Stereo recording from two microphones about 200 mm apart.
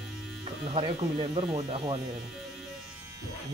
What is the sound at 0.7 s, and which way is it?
Speech, 25° right (ahead or behind).